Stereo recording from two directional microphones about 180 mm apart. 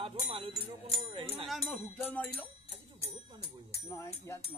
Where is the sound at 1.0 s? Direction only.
30° right (ahead or behind).